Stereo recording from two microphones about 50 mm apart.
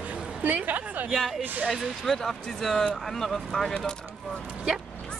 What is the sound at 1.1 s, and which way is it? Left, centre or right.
Speech, centre.